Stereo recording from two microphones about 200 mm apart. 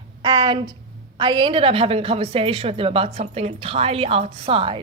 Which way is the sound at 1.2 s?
25° right (ahead or behind).